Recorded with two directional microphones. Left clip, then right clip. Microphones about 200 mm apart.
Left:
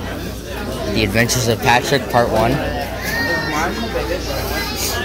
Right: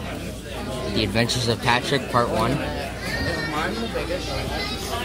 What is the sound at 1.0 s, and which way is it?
Speech, 10° right (ahead or behind).